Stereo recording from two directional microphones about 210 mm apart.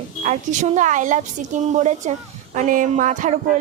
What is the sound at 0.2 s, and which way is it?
A woman's voice, 35° right (ahead or behind).